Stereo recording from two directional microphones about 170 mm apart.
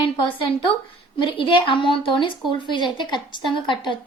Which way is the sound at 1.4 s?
30° left (ahead or behind).